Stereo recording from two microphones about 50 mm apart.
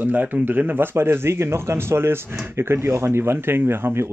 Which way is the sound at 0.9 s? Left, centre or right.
Right.